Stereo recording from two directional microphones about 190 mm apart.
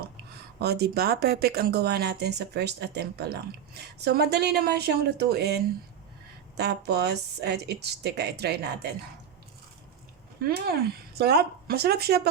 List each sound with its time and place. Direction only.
0.6 s speech: 60° right (ahead or behind)
6.6 s speech: 60° right (ahead or behind)
10.4 s speech: 55° right (ahead or behind)